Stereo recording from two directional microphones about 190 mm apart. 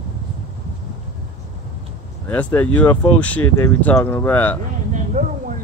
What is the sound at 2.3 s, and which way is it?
Speech, 10° left (ahead or behind).